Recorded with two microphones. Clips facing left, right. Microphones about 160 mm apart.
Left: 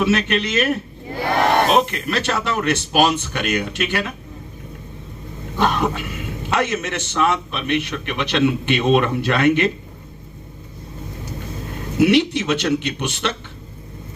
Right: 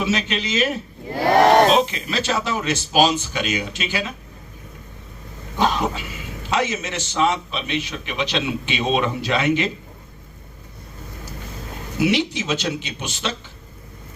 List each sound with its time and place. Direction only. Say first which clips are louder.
0.0 s a man's voice: left 4 dB; 60° left (ahead or behind)
5.5 s a man's voice: left 1 dB; 60° left (ahead or behind)
11.9 s a man's voice: left 5 dB; 60° left (ahead or behind)